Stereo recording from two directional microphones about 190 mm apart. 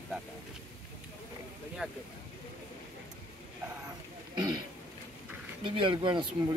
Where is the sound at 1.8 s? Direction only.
5° right (ahead or behind).